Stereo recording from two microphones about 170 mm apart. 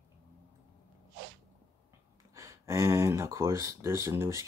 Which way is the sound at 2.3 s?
20° right (ahead or behind).